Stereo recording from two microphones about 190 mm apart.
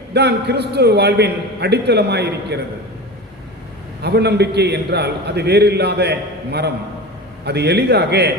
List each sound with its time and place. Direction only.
0.1 s a man's voice: 60° right (ahead or behind)
4.0 s a man's voice: 60° right (ahead or behind)